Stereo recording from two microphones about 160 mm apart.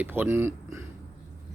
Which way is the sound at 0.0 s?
15° right (ahead or behind).